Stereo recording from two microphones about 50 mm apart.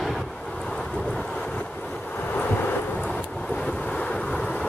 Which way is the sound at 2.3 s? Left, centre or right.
Left.